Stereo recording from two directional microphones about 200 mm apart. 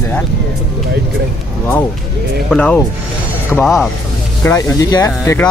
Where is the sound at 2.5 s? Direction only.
5° left (ahead or behind).